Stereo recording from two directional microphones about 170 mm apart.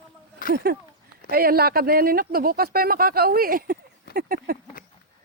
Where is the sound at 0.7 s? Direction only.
70° right (ahead or behind).